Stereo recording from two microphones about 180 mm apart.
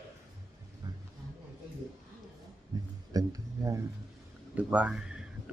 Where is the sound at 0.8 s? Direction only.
20° right (ahead or behind).